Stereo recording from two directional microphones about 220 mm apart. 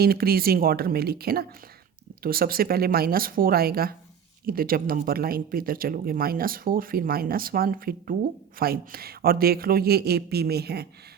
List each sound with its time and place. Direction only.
0.0 s speech: 45° right (ahead or behind)